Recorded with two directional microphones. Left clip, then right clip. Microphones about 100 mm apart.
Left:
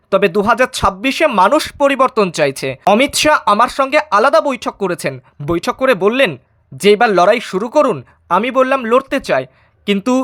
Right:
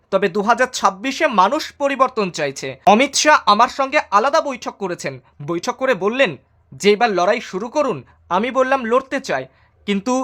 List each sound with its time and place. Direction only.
0.1 s speech: 40° left (ahead or behind); by 2.8 s 55° left (ahead or behind)
3.0 s speech: 45° left (ahead or behind)
4.1 s speech: 55° left (ahead or behind)
8.3 s speech: 30° left (ahead or behind)